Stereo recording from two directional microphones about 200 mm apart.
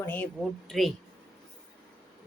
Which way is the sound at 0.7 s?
Centre (ahead or behind).